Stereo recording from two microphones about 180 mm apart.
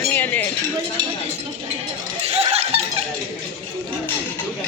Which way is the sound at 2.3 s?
35° right (ahead or behind).